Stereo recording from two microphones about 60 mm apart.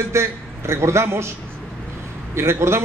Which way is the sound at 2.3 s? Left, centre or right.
Right.